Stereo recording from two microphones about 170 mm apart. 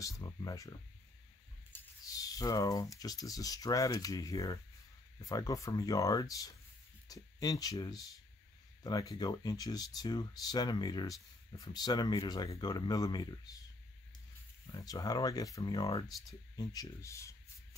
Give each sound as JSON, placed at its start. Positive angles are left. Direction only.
{"t": 0.2, "sound": "speech", "side_deg": 20}
{"t": 14.7, "sound": "speech", "side_deg": 20}